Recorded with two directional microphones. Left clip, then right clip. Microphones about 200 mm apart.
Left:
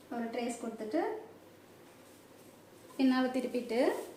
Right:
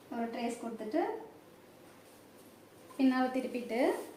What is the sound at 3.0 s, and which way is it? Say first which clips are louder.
Speech: even; 40° left (ahead or behind).